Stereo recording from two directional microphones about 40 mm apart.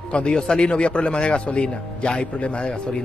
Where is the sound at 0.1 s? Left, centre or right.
Left.